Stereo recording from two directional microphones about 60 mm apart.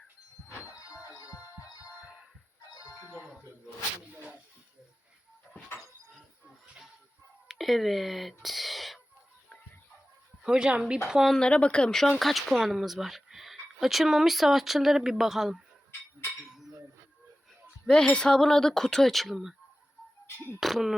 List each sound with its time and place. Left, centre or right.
0.7 s music: left
3.1 s music: centre
7.4 s speech: centre
10.4 s speech: centre
11.1 s speech: centre
11.3 s speech: centre
11.9 s speech: centre
16.5 s a sound: centre
17.8 s speech: centre
20.2 s speech: left
20.6 s speech: centre